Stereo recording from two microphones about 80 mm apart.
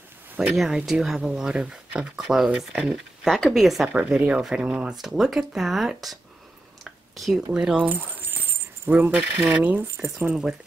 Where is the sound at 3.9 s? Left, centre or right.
Centre.